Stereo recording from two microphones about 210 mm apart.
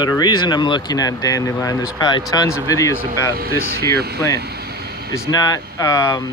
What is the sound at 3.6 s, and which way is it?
Speech, 50° right (ahead or behind).